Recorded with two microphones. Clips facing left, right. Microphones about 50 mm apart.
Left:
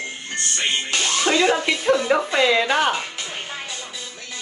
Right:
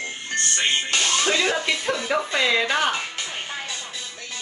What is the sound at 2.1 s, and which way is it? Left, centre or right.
Speech, centre.